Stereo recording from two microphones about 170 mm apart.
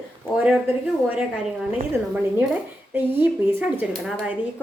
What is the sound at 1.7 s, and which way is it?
A woman's voice, 10° right (ahead or behind).